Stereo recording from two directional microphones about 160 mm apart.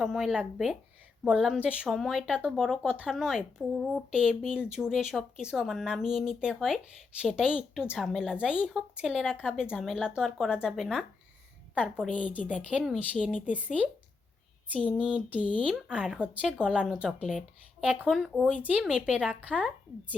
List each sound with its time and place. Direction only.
0.0 s speech: 5° right (ahead or behind)
15.0 s speech: 5° right (ahead or behind)